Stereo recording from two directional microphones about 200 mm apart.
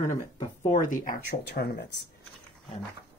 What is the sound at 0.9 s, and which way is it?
Speech, 45° left (ahead or behind).